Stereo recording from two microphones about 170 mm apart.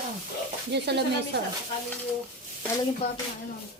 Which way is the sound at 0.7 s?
80° right.